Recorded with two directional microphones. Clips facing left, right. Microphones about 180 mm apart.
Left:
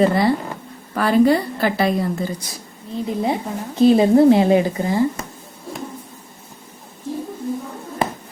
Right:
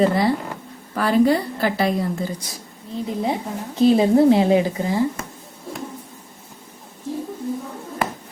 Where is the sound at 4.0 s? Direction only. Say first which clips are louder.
Left 2 dB; 55° left (ahead or behind).